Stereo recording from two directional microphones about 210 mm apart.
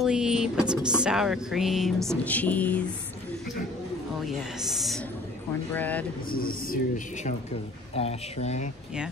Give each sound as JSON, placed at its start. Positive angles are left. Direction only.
{"t": 0.0, "sound": "music", "side_deg": -5}
{"t": 2.0, "sound": "speech", "side_deg": 5}
{"t": 4.3, "sound": "music", "side_deg": 0}
{"t": 5.7, "sound": "speech", "side_deg": 10}
{"t": 6.3, "sound": "speech", "side_deg": 45}
{"t": 7.9, "sound": "speech", "side_deg": 30}